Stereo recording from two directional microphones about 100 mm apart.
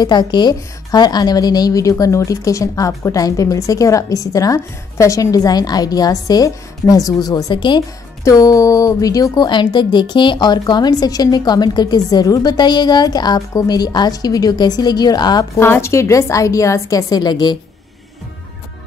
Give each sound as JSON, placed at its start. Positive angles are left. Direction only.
{"t": 0.0, "sound": "a woman's voice", "side_deg": 45}
{"t": 7.5, "sound": "a woman's voice", "side_deg": 55}
{"t": 8.2, "sound": "a woman's voice", "side_deg": 35}
{"t": 15.5, "sound": "a woman's voice", "side_deg": 25}